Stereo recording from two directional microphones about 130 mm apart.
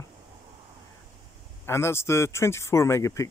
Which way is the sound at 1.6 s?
20° left (ahead or behind).